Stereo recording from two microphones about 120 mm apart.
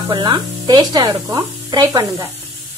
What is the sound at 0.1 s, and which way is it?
Speech, 40° right (ahead or behind).